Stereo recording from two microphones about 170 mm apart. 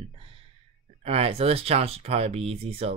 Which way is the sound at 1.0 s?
35° right (ahead or behind).